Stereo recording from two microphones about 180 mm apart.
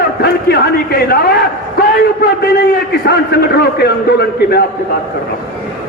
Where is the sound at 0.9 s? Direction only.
60° left (ahead or behind).